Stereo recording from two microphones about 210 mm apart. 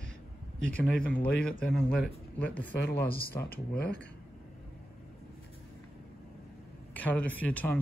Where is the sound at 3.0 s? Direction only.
45° left (ahead or behind).